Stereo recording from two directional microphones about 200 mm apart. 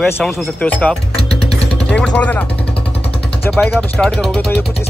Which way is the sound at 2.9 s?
30° left (ahead or behind).